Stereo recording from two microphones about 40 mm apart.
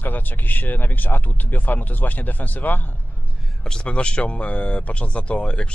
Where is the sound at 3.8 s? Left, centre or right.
Left.